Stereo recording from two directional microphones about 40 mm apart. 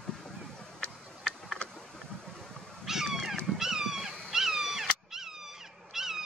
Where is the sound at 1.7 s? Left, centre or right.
Centre.